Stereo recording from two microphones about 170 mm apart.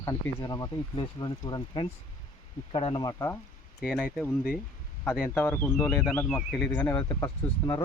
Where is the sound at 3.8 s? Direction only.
Centre (ahead or behind); by 7.8 s 20° left (ahead or behind).